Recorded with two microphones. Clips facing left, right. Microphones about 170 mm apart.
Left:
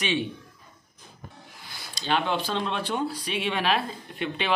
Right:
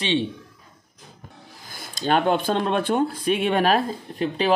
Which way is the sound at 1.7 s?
50° right (ahead or behind).